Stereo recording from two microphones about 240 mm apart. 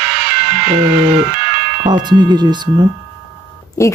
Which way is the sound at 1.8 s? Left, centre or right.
Centre.